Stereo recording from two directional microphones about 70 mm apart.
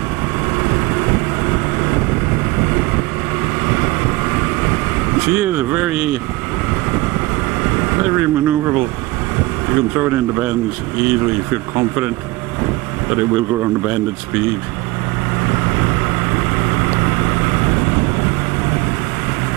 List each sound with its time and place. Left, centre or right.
0.6 s vehicle: right
3.6 s vehicle: right
9.7 s speech: right
13.1 s speech: right